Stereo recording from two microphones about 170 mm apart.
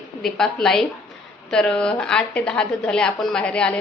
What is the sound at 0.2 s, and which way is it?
A woman's voice, 5° left (ahead or behind).